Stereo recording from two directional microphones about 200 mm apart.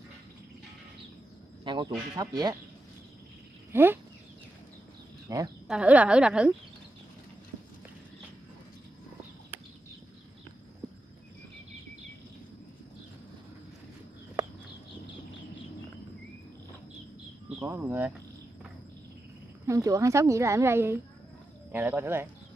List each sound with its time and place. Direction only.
1.6 s speech: 25° right (ahead or behind)
3.7 s a woman's voice: 10° right (ahead or behind)
5.3 s a woman's voice: 15° right (ahead or behind)
5.7 s a woman's voice: 5° right (ahead or behind)
17.6 s a woman's voice: 10° right (ahead or behind)
19.6 s a woman's voice: 15° right (ahead or behind)